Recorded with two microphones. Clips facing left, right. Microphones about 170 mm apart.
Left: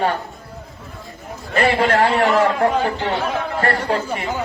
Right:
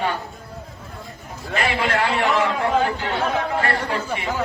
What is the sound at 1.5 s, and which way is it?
A man's voice, 40° left (ahead or behind).